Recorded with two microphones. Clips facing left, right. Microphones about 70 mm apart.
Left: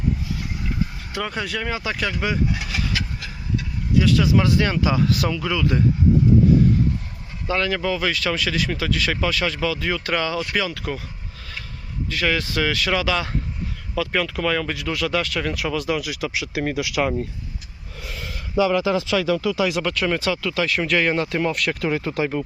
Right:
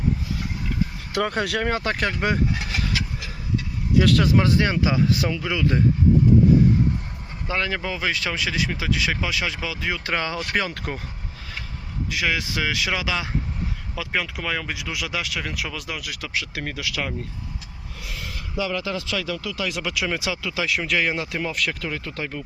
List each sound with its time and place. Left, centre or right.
1.1 s speech: right
2.5 s vehicle: right
4.0 s speech: right
4.3 s speech: right
7.4 s speech: right
10.5 s speech: right
12.1 s speech: centre
16.3 s speech: centre
18.5 s speech: left
18.8 s speech: left
19.8 s speech: centre
20.7 s speech: centre
21.8 s speech: left